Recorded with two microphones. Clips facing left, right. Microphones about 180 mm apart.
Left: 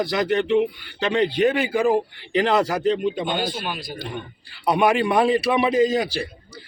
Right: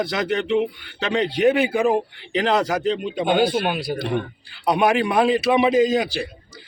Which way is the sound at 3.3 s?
60° right (ahead or behind).